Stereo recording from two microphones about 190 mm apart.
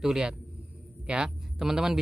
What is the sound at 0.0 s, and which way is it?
Speech, 5° right (ahead or behind).